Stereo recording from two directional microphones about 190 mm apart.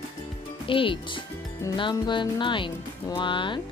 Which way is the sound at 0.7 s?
25° left (ahead or behind).